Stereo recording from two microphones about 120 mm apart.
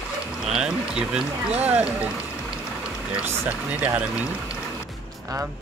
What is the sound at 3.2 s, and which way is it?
Speech, 20° right (ahead or behind).